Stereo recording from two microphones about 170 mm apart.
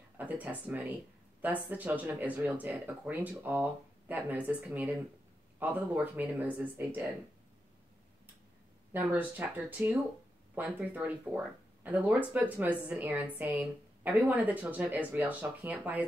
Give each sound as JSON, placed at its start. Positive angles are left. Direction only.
{"t": 0.2, "sound": "speech", "side_deg": -10}
{"t": 8.9, "sound": "speech", "side_deg": -10}